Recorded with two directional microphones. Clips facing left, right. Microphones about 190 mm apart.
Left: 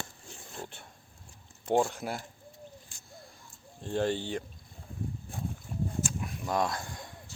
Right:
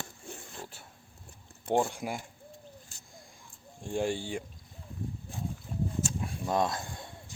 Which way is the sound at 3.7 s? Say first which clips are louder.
Left 1 dB; 10° right (ahead or behind).